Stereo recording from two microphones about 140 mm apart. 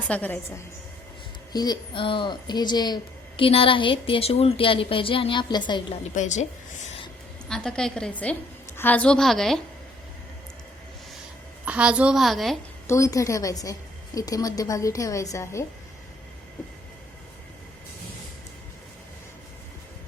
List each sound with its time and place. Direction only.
0.1 s a woman's voice: 10° left (ahead or behind)
1.5 s a woman's voice: 30° left (ahead or behind)
3.4 s a woman's voice: 40° left (ahead or behind)
6.1 s a woman's voice: 60° left (ahead or behind)
7.4 s a woman's voice: 5° left (ahead or behind)
11.6 s a woman's voice: 10° right (ahead or behind)
12.9 s a woman's voice: 25° left (ahead or behind)